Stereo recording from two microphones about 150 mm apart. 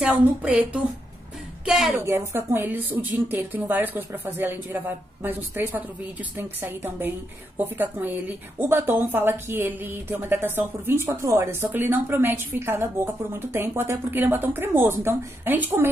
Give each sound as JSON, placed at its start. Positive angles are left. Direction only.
{"t": 0.0, "sound": "a woman's voice", "side_deg": -10}
{"t": 1.7, "sound": "a woman's voice", "side_deg": 0}
{"t": 2.0, "sound": "a woman's voice", "side_deg": -15}